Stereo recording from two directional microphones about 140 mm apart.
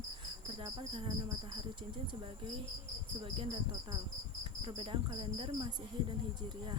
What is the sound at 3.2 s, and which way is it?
Cricket, 40° right (ahead or behind).